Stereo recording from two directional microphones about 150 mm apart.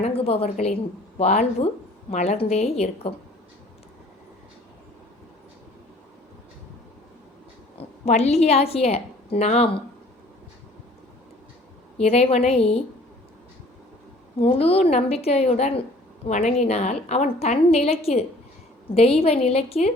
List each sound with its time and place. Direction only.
0.0 s a woman's voice: 40° left (ahead or behind)
7.8 s a woman's voice: 45° left (ahead or behind)
11.9 s a woman's voice: 45° left (ahead or behind)
14.3 s a woman's voice: 40° left (ahead or behind)